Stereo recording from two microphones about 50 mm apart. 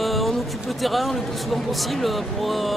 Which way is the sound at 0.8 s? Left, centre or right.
Centre.